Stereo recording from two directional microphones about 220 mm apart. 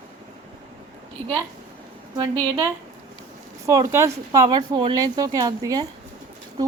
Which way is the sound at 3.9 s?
15° right (ahead or behind).